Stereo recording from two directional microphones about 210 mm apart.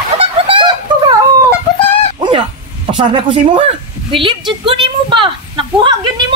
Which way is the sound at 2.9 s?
25° right (ahead or behind).